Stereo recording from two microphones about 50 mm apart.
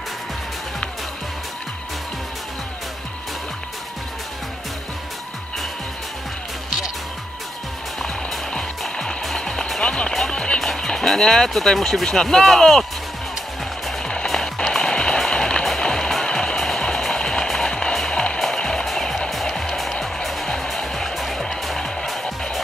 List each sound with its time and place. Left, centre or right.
8.0 s music: centre
10.6 s speech: centre
14.0 s music: centre